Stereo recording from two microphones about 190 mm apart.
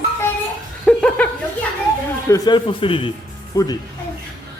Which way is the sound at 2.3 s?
25° left (ahead or behind).